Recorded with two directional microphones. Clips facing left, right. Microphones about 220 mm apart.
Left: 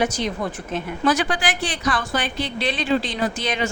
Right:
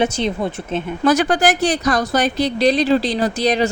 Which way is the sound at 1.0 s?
45° right (ahead or behind).